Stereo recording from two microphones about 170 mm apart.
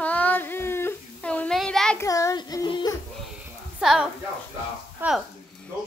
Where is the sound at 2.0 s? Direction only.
20° left (ahead or behind).